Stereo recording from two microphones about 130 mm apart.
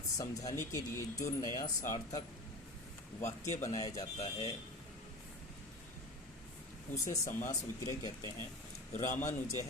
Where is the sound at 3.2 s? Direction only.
65° left (ahead or behind).